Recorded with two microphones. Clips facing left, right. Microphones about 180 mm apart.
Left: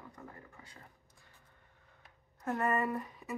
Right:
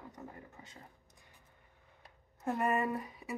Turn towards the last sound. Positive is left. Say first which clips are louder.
# even
turn(degrees=-10)  # may be behind; listen again after turning